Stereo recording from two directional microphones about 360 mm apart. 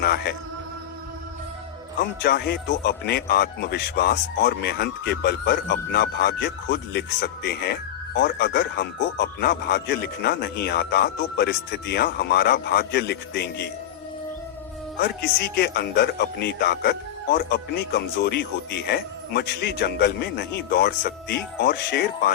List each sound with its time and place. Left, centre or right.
0.0 s speech: left
2.0 s speech: left
14.9 s speech: left